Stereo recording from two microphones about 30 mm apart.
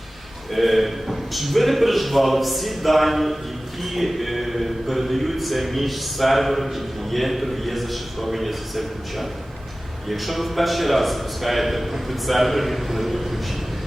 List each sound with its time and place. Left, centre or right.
0.5 s speech: centre